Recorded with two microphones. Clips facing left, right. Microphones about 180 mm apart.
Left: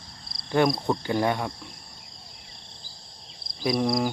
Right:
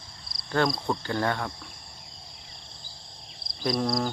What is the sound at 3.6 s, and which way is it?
Speech, 5° left (ahead or behind).